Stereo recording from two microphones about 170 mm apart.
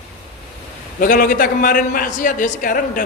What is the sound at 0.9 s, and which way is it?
A man's voice, 55° left (ahead or behind).